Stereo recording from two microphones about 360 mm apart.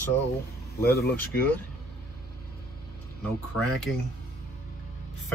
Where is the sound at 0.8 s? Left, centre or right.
Left.